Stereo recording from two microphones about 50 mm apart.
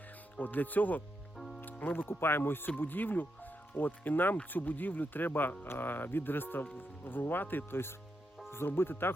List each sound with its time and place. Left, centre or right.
0.3 s speech: left
1.4 s music: centre
1.8 s speech: left